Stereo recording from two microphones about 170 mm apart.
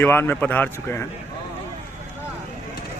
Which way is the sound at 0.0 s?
10° left (ahead or behind).